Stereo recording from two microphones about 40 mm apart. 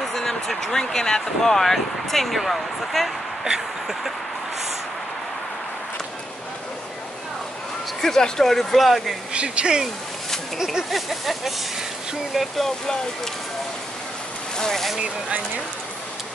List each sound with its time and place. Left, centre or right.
0.0 s speech: centre
3.4 s a sound: centre
8.0 s speech: centre
9.3 s speech: right
10.6 s a sound: centre
10.9 s speech: centre
12.8 s speech: centre
14.6 s speech: centre